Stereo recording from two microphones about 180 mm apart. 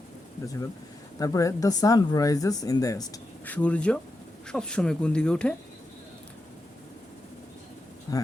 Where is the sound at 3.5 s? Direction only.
5° left (ahead or behind).